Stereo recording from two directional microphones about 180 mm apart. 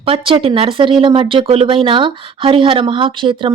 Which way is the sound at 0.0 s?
30° right (ahead or behind).